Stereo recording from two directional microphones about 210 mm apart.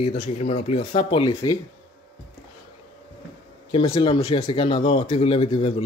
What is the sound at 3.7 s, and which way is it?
A man's voice, 20° left (ahead or behind).